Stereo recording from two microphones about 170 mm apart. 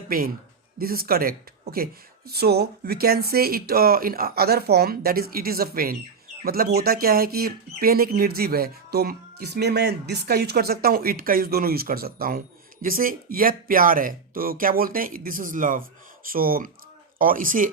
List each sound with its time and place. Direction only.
0.1 s speech: 60° right (ahead or behind)